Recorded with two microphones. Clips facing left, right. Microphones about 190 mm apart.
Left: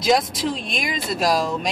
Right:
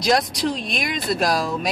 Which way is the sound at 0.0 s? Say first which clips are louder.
Even; centre (ahead or behind).